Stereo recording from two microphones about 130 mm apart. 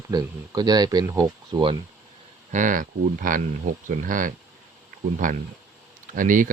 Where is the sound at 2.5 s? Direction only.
90° right.